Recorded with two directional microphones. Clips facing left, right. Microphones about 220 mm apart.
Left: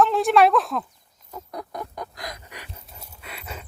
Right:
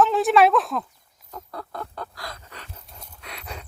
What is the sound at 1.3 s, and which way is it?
Fowl, 15° left (ahead or behind).